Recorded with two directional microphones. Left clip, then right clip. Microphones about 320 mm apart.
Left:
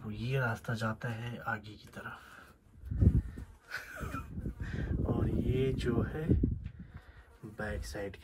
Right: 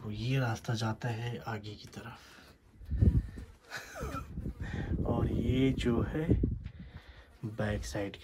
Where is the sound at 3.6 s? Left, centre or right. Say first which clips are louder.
Even; centre.